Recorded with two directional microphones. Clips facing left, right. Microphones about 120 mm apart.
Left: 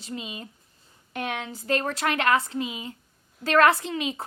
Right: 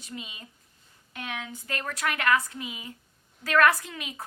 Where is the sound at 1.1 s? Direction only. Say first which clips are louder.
Left 6 dB; 65° left (ahead or behind).